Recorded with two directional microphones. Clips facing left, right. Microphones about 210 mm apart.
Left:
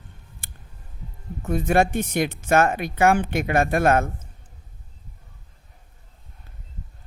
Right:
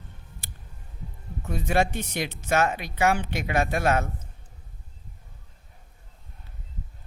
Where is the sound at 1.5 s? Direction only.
50° left (ahead or behind).